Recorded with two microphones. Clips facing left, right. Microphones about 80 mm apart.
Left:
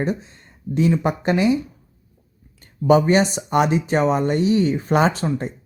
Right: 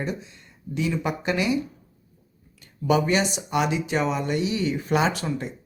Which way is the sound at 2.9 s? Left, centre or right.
Left.